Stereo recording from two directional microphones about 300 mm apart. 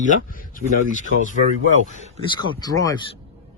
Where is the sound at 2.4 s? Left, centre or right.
Centre.